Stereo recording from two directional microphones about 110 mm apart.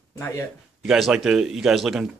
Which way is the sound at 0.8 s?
5° right (ahead or behind).